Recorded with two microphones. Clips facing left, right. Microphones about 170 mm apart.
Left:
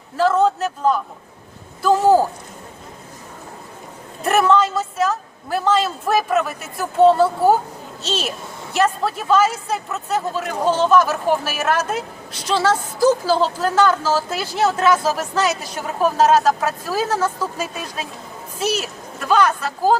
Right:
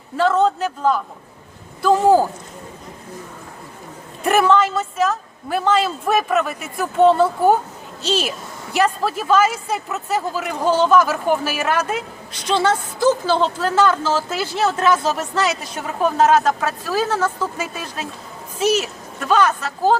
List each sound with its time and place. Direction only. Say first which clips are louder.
0.2 s a woman's voice: even; 5° left (ahead or behind)
4.2 s a woman's voice: even; centre (ahead or behind)
17.1 s a woman's voice: even; centre (ahead or behind)